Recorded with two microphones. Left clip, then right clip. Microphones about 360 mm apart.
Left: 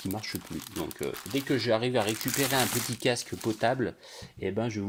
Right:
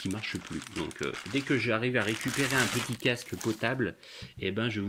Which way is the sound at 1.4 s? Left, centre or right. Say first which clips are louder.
Left 2 dB; left.